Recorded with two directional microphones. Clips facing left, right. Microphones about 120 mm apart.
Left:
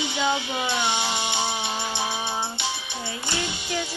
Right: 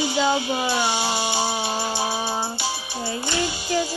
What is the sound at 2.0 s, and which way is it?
Music, 35° right (ahead or behind).